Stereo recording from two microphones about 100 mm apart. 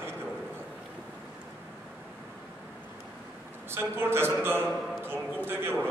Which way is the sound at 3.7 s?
25° right (ahead or behind).